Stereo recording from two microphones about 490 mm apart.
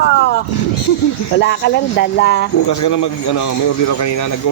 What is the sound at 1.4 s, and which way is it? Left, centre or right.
Speech, left.